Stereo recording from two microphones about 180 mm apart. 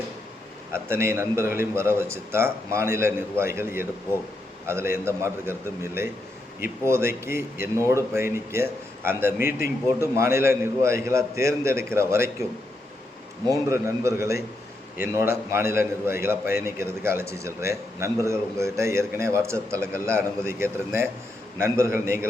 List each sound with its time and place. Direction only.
0.7 s a man's voice: 15° right (ahead or behind)
13.7 s a man's voice: 15° right (ahead or behind)